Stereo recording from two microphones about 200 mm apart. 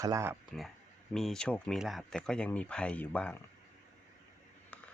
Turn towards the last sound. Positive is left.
turn(degrees=10)  # may be behind; listen again after turning